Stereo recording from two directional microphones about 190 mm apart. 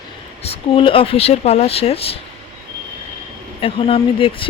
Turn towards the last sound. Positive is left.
turn(degrees=30)  # may be behind; listen again after turning